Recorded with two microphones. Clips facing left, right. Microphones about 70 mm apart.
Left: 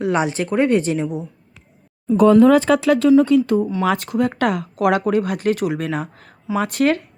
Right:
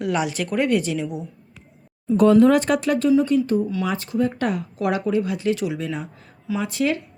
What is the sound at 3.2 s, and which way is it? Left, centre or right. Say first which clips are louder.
Speech: left 4 dB; left.